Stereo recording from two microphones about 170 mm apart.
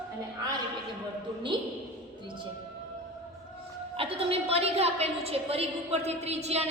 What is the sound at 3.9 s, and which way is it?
A woman's voice, 35° right (ahead or behind).